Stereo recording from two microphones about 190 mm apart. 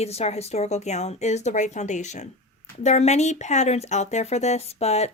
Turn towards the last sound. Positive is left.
turn(degrees=35)  # may be behind; listen again after turning